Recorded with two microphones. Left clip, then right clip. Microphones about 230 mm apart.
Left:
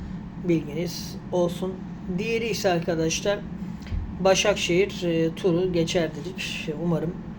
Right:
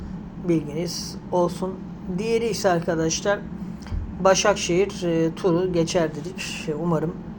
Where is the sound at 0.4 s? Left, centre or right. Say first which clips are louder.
Right 2 dB; centre.